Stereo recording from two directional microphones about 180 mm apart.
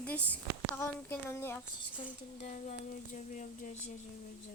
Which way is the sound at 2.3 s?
35° left (ahead or behind).